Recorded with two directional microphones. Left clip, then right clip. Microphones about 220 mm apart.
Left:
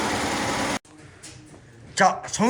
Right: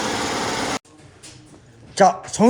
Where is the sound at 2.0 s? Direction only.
25° right (ahead or behind).